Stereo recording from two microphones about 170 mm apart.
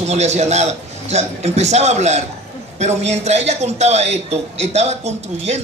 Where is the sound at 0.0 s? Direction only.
40° right (ahead or behind).